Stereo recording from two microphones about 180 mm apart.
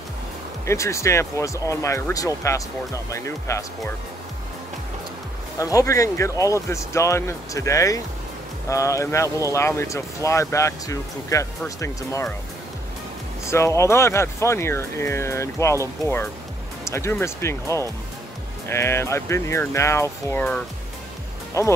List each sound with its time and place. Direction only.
0.7 s speech: 15° left (ahead or behind)
5.6 s speech: 20° left (ahead or behind)
13.5 s speech: 15° left (ahead or behind)